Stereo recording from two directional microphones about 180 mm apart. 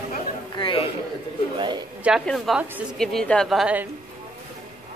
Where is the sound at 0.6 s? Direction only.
30° left (ahead or behind).